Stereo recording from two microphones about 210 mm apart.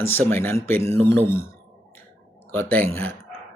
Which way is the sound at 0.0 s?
10° left (ahead or behind).